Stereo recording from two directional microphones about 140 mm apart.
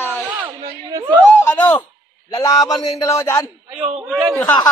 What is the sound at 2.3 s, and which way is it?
A man's voice, 25° left (ahead or behind).